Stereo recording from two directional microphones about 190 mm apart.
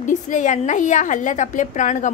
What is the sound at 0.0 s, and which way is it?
A woman's voice, 40° left (ahead or behind).